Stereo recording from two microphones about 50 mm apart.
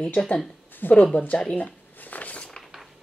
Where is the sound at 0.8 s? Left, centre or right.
Left.